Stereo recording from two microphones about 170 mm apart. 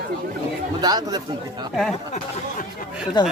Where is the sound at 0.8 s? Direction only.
25° right (ahead or behind).